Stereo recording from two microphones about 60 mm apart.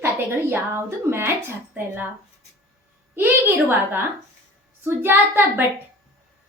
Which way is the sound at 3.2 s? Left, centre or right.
Right.